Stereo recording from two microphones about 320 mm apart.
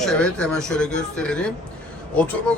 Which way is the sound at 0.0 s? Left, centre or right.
Centre.